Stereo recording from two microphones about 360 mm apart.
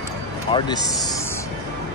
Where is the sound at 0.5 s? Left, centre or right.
Centre.